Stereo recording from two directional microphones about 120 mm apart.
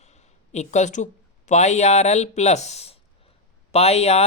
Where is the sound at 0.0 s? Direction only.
70° left (ahead or behind).